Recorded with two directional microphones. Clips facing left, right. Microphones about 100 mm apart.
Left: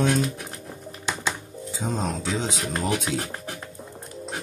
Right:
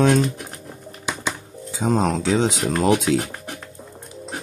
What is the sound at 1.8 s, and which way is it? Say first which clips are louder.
Speech: right 8 dB; 85° right.